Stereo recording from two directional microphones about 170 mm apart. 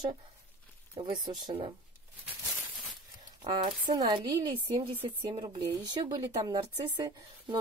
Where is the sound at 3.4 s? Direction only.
25° right (ahead or behind).